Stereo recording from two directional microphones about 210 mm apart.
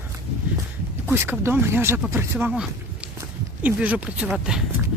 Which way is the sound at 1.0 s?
10° right (ahead or behind).